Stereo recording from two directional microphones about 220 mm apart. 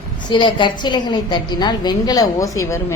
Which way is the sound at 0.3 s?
20° left (ahead or behind).